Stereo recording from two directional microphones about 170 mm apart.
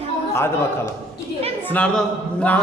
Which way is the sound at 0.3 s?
15° left (ahead or behind).